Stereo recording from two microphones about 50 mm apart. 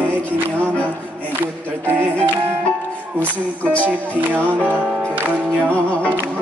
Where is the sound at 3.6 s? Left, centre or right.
Left.